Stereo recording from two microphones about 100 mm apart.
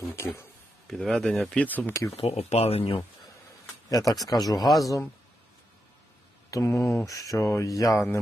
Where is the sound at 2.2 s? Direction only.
90° left.